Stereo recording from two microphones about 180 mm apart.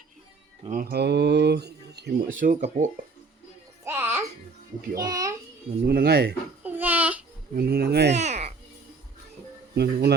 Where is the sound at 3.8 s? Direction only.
15° right (ahead or behind).